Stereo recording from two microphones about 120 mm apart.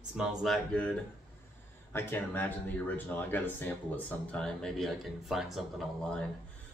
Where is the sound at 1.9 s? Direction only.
20° left (ahead or behind); by 6.3 s centre (ahead or behind).